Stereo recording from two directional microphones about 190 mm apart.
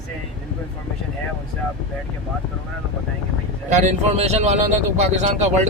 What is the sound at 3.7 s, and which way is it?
Speech, 40° right (ahead or behind).